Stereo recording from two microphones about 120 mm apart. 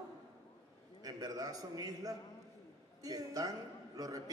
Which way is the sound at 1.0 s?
30° right (ahead or behind).